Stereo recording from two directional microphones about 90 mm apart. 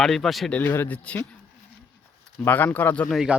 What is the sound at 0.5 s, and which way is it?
Speech, 20° left (ahead or behind).